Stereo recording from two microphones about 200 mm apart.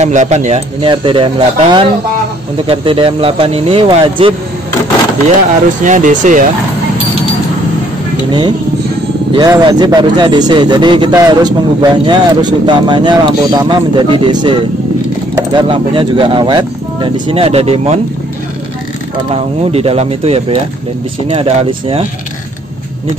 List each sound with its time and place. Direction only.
0.0 s speech: 35° right (ahead or behind)
5.9 s speech: 40° right (ahead or behind)
8.3 s speech: 20° right (ahead or behind)
19.7 s speech: 30° right (ahead or behind)